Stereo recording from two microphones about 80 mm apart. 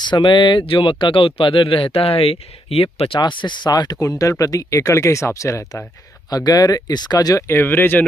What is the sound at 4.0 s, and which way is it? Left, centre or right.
Speech, left.